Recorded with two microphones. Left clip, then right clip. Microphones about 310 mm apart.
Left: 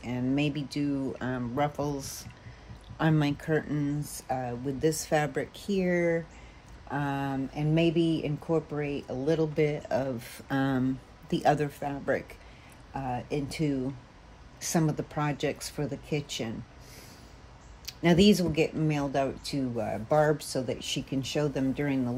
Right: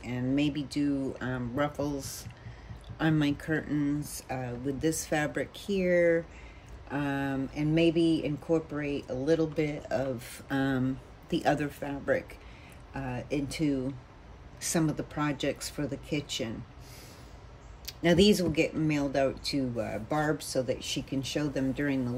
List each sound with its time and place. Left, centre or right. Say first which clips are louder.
0.0 s speech: even; left
17.8 s speech: even; left